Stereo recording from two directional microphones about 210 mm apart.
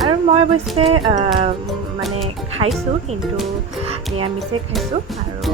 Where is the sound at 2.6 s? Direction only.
25° right (ahead or behind).